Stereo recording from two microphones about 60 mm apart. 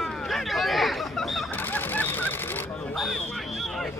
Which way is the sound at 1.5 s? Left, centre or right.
Left.